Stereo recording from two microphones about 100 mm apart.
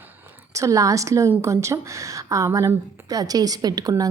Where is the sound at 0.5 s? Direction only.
30° right (ahead or behind).